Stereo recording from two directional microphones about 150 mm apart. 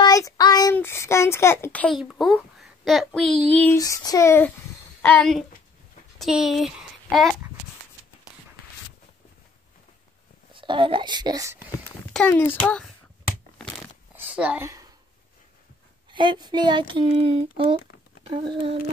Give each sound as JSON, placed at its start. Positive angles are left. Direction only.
{"t": 0.0, "sound": "a sound", "side_deg": 25}
{"t": 0.7, "sound": "speech", "side_deg": 15}
{"t": 2.0, "sound": "a child's voice", "side_deg": 0}
{"t": 3.7, "sound": "female singing", "side_deg": 25}
{"t": 5.0, "sound": "speech", "side_deg": 15}
{"t": 6.1, "sound": "a child's voice", "side_deg": 0}
{"t": 10.5, "sound": "speech", "side_deg": -35}
{"t": 12.1, "sound": "speech", "side_deg": 10}
{"t": 14.1, "sound": "a sound", "side_deg": -10}
{"t": 16.1, "sound": "speech", "side_deg": -30}